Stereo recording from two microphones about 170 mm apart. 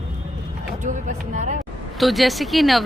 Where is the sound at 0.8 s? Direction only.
45° right (ahead or behind).